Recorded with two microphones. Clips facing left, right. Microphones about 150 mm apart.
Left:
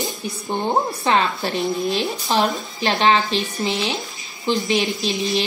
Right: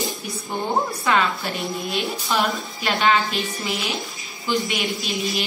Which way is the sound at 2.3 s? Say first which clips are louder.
Left 3 dB; 25° left (ahead or behind).